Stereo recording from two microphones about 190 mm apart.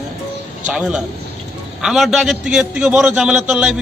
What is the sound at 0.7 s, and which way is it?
A man's voice, 5° right (ahead or behind).